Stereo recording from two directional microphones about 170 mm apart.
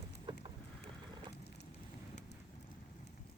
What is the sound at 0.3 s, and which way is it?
Boat, 25° right (ahead or behind).